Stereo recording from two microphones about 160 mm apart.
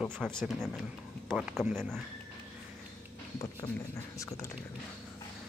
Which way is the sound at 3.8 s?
20° left (ahead or behind).